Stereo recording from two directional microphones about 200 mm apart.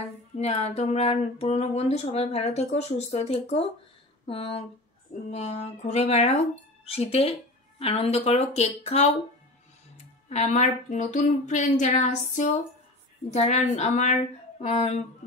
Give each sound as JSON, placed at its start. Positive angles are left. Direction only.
{"t": 0.4, "sound": "speech", "side_deg": 35}
{"t": 10.3, "sound": "speech", "side_deg": 35}